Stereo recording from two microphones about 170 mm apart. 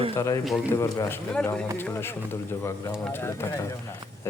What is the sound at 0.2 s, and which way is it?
Speech, 20° left (ahead or behind).